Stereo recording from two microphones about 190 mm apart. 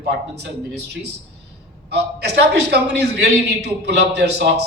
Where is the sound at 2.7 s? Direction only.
60° right (ahead or behind).